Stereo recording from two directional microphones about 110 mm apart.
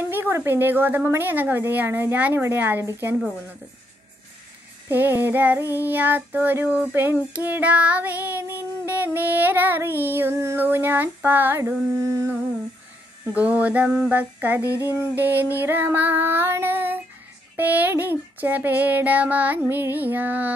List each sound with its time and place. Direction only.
0.1 s a woman's voice: 20° right (ahead or behind)
4.8 s child singing: 20° right (ahead or behind)
14.6 s a sound: 30° left (ahead or behind)
15.1 s child singing: 15° right (ahead or behind)
15.5 s a woman's voice: 20° right (ahead or behind)
17.6 s child singing: 15° right (ahead or behind)